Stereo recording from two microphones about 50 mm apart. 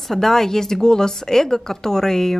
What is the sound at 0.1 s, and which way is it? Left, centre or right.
Speech, centre.